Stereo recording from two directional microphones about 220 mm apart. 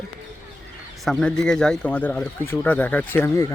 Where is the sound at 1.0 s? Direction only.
Centre (ahead or behind).